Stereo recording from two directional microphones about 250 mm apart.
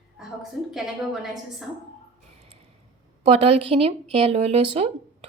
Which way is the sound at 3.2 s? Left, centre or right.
Right.